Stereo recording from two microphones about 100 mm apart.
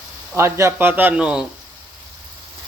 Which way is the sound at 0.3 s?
25° right (ahead or behind).